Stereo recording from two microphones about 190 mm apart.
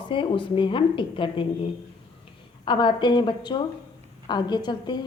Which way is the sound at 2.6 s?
25° left (ahead or behind).